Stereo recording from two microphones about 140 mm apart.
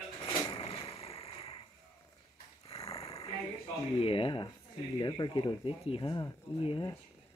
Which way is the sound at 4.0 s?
40° left (ahead or behind).